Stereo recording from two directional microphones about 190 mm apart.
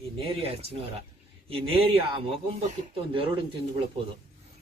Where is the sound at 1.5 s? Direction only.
30° right (ahead or behind).